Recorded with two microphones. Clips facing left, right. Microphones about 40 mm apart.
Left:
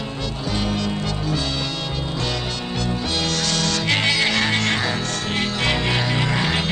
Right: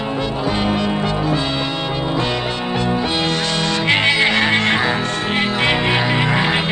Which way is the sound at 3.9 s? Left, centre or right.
Right.